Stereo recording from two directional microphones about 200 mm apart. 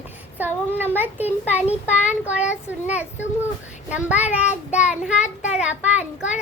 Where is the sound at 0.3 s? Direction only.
10° right (ahead or behind).